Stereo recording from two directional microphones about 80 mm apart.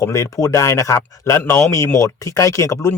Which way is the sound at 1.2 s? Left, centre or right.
Left.